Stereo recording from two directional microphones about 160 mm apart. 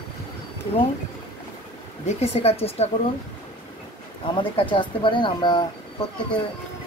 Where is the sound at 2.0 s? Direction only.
40° left (ahead or behind).